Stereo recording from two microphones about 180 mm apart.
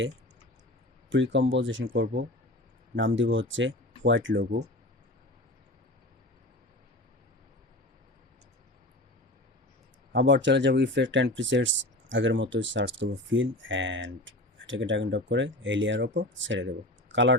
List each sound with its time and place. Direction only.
1.1 s speech: 90° right
1.9 s speech: 75° right (ahead or behind)
2.9 s speech: 90° right
10.1 s speech: 85° right